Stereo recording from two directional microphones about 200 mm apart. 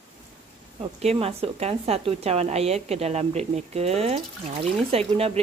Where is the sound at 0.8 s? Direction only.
30° right (ahead or behind).